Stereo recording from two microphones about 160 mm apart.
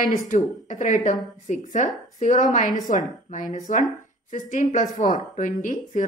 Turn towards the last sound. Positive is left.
turn(degrees=55)  # may be behind; listen again after turning